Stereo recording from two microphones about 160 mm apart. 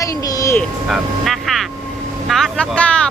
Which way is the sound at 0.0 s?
20° left (ahead or behind).